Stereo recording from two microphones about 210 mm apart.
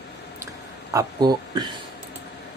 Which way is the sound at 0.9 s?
20° right (ahead or behind).